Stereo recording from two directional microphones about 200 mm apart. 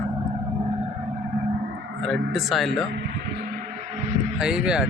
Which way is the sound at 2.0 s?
Centre (ahead or behind).